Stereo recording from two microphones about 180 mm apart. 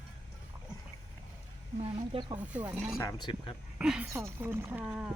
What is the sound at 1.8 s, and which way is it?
Speech, 25° right (ahead or behind).